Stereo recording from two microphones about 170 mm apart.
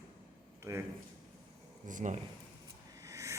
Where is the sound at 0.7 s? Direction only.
20° right (ahead or behind).